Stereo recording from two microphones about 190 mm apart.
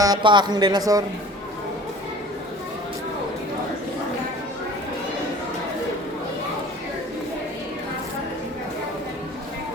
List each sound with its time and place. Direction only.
0.0 s a woman's voice: 20° right (ahead or behind)